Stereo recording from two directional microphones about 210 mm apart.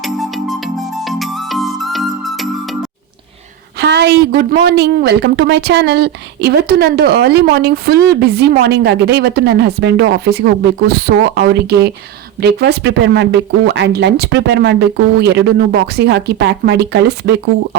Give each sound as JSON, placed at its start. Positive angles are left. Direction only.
{"t": 0.0, "sound": "music", "side_deg": 0}
{"t": 3.8, "sound": "a woman's voice", "side_deg": -55}